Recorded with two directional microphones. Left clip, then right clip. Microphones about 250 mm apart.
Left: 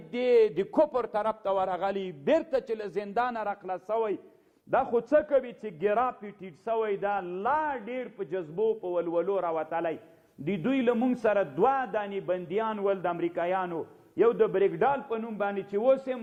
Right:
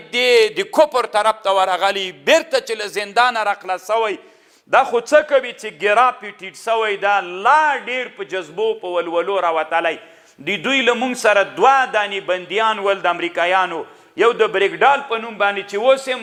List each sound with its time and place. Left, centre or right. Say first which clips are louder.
0.1 s a man's voice: right 9 dB; centre
8.5 s a man's voice: right 8 dB; right
8.9 s a man's voice: right 9 dB; centre